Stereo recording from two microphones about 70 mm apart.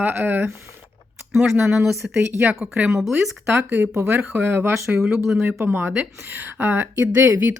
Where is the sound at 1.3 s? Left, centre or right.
Centre.